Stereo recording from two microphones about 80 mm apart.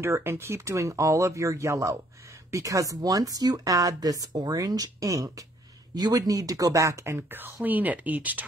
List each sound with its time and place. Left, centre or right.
0.0 s speech: right
5.9 s speech: right